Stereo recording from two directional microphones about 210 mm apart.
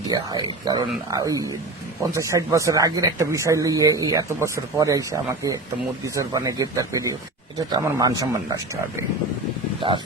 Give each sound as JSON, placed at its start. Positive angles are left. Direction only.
{"t": 0.1, "sound": "speech", "side_deg": -20}